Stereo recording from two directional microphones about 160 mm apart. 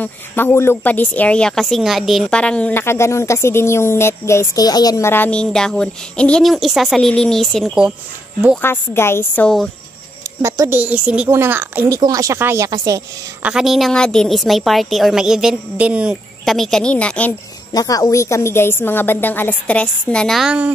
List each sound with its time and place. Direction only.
0.0 s speech: 15° left (ahead or behind); by 7.9 s centre (ahead or behind)
8.5 s speech: 15° left (ahead or behind)
10.4 s speech: 15° right (ahead or behind)
13.4 s a woman's voice: 5° right (ahead or behind)
17.7 s speech: 20° left (ahead or behind); by 20.7 s 5° right (ahead or behind)